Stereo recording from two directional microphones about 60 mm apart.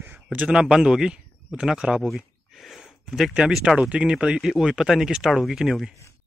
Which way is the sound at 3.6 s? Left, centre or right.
Centre.